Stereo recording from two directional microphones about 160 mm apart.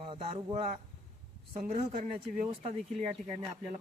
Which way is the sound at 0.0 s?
35° right (ahead or behind).